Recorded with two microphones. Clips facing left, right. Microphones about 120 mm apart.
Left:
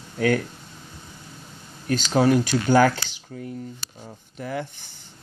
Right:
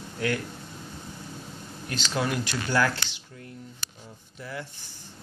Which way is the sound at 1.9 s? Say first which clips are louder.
Left 10 dB; 45° left (ahead or behind).